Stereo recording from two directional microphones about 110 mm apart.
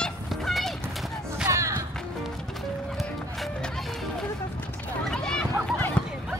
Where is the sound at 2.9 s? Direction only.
Centre (ahead or behind).